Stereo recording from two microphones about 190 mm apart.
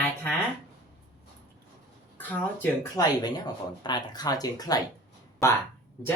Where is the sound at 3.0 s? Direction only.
20° left (ahead or behind).